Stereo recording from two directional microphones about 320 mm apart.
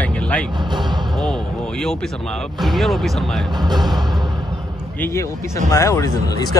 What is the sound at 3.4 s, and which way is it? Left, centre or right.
Speech, centre.